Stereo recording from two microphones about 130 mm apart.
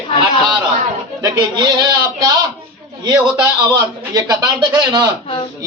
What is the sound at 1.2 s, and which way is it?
Speech, 30° right (ahead or behind).